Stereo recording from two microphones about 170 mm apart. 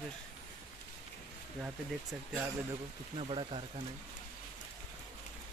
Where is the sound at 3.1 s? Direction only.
35° right (ahead or behind).